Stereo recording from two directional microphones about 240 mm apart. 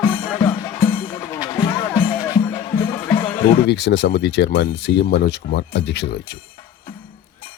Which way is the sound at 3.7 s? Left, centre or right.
Left.